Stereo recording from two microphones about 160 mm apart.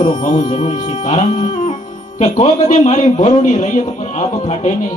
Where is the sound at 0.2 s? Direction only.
50° left (ahead or behind).